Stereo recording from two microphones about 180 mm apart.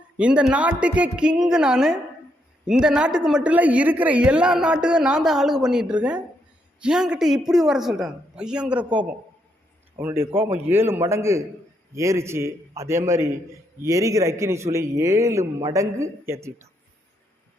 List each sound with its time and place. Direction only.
0.2 s a woman's voice: 5° right (ahead or behind)